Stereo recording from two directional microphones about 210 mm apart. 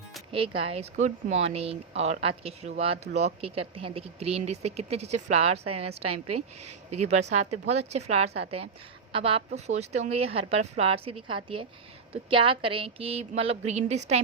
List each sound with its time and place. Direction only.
0.3 s a woman's voice: 25° right (ahead or behind)
5.6 s speech: 90° right
7.1 s a woman's voice: 30° right (ahead or behind)